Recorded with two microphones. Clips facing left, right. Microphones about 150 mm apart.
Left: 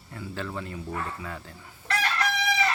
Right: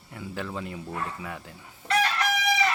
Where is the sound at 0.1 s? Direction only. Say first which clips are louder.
Even; 15° right (ahead or behind).